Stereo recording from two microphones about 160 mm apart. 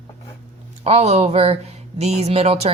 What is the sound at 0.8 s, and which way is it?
Speech, 40° right (ahead or behind).